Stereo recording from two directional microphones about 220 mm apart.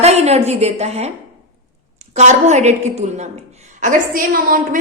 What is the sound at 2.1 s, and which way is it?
A woman's voice, 30° right (ahead or behind).